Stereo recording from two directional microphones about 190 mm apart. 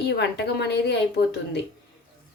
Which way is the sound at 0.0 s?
60° left (ahead or behind).